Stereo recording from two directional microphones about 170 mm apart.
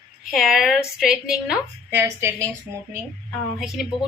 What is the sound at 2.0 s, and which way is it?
Speech, 15° right (ahead or behind).